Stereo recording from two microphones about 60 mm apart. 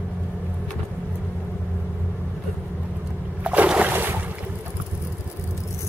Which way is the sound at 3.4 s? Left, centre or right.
Centre.